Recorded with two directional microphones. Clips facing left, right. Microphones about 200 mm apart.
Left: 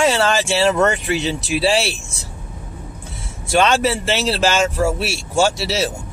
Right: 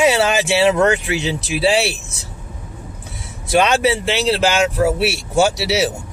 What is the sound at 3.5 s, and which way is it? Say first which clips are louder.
Speech: right 1 dB; centre (ahead or behind).